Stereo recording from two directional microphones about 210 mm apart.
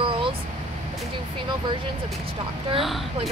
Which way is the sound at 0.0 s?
25° right (ahead or behind).